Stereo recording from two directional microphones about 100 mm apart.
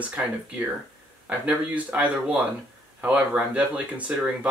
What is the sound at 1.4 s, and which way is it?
Speech, 15° right (ahead or behind).